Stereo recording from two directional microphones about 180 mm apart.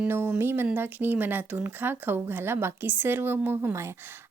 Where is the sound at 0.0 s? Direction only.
10° right (ahead or behind).